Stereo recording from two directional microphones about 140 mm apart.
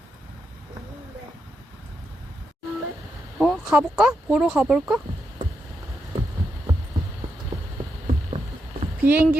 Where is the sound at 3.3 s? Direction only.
5° left (ahead or behind).